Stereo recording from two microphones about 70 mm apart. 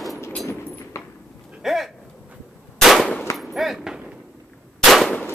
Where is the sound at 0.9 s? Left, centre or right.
Left.